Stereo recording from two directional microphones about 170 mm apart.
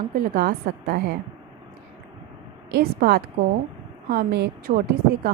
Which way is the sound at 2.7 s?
70° right (ahead or behind).